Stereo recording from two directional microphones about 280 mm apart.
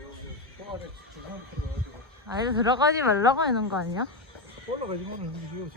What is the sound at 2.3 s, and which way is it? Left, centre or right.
Speech, centre.